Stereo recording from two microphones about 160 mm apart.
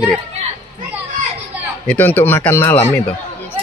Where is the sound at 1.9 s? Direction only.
10° left (ahead or behind).